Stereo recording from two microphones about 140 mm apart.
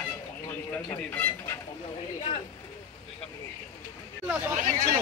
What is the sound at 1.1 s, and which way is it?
Speech, 15° left (ahead or behind).